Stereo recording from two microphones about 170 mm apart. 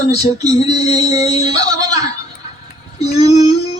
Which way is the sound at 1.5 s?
20° right (ahead or behind).